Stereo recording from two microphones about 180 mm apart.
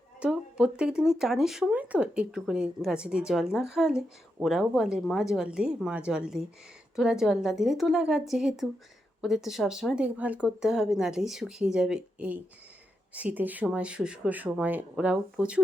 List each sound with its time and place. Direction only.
0.2 s speech: 5° right (ahead or behind)